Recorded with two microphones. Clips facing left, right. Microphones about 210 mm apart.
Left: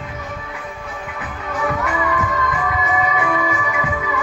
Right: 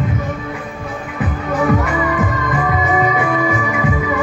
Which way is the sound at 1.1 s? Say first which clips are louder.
Right 8 dB; 45° right (ahead or behind).